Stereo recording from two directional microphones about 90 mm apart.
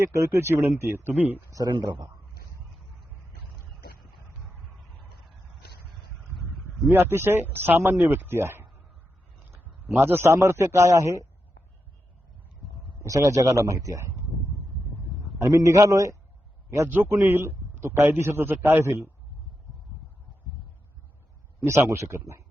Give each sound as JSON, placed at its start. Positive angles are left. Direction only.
{"t": 0.0, "sound": "a man's voice", "side_deg": -35}
{"t": 1.5, "sound": "speech", "side_deg": -40}
{"t": 6.8, "sound": "a man's voice", "side_deg": -25}
{"t": 10.0, "sound": "a man's voice", "side_deg": -25}
{"t": 13.0, "sound": "a man's voice", "side_deg": -35}
{"t": 15.4, "sound": "a man's voice", "side_deg": -40}
{"t": 16.9, "sound": "a man's voice", "side_deg": -20}
{"t": 17.2, "sound": "a man's voice", "side_deg": -30}
{"t": 21.6, "sound": "a man's voice", "side_deg": -30}